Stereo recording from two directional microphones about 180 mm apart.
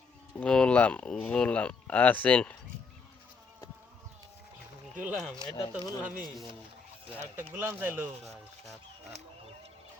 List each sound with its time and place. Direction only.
0.3 s speech: 5° left (ahead or behind)
4.9 s rub: 5° right (ahead or behind)
5.4 s speech: 25° left (ahead or behind)
6.0 s speech: 10° right (ahead or behind)
8.2 s rub: centre (ahead or behind)